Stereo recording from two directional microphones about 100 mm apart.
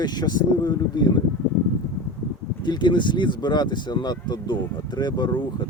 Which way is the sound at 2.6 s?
50° left (ahead or behind).